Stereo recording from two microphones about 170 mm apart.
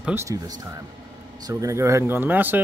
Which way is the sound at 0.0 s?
15° right (ahead or behind).